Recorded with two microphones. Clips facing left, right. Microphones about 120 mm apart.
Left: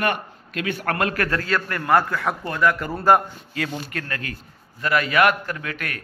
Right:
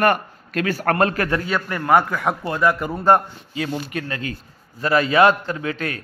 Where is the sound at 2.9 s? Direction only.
5° left (ahead or behind).